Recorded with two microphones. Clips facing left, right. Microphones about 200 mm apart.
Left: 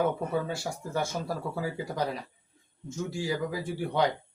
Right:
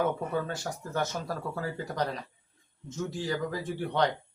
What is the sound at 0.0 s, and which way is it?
Speech, 10° left (ahead or behind).